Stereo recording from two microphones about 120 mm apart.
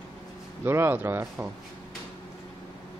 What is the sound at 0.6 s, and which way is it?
Speech, 20° right (ahead or behind).